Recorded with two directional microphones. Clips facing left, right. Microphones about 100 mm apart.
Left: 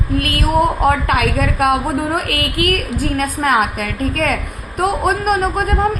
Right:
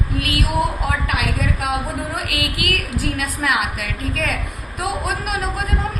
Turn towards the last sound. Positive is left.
turn(degrees=50)  # may be behind; listen again after turning